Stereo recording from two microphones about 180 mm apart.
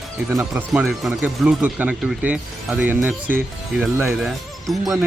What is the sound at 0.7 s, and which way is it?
Speech, centre (ahead or behind).